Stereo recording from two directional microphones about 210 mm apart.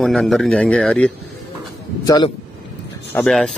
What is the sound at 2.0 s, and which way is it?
Speech, 20° left (ahead or behind).